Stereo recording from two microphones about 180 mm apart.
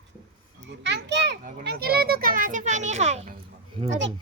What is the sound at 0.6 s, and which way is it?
Speech, 80° right.